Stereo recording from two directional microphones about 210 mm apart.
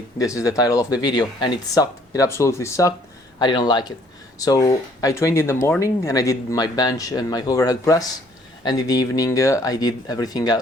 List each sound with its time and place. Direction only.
0.3 s speech: 15° left (ahead or behind)